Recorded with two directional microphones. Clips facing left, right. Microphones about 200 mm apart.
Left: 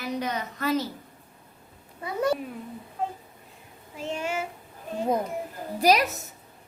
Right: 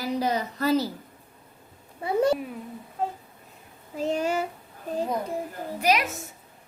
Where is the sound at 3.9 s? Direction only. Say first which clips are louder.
Right 5 dB; 40° right (ahead or behind).